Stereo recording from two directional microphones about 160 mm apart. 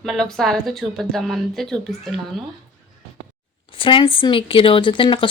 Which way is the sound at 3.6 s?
35° left (ahead or behind).